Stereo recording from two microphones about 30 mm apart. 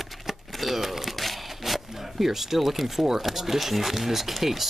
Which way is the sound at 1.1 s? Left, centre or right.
Centre.